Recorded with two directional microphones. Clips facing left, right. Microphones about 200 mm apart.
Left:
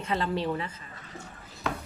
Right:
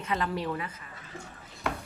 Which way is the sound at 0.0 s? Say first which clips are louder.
Left 2 dB; 30° left (ahead or behind).